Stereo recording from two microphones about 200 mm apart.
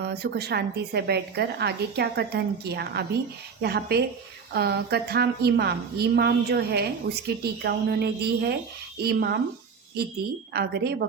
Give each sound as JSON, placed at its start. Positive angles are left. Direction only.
{"t": 0.0, "sound": "a woman's voice", "side_deg": -55}
{"t": 10.5, "sound": "a woman's voice", "side_deg": -55}